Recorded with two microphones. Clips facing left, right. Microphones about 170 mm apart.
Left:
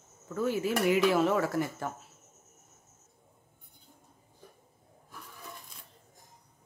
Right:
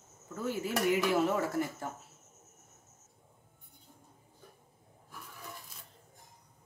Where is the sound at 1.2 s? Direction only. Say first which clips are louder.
Left 3 dB; 90° left.